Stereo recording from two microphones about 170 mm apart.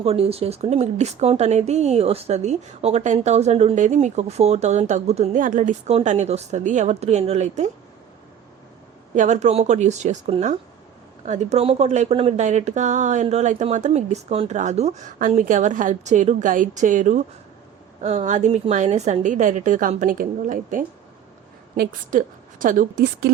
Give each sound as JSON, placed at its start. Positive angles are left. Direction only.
{"t": 0.0, "sound": "speech", "side_deg": -35}
{"t": 9.1, "sound": "speech", "side_deg": -45}